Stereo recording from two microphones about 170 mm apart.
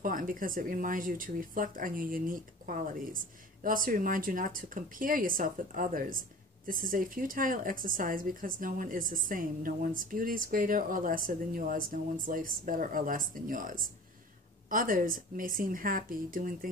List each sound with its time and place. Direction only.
0.0 s a woman's voice: 55° right (ahead or behind)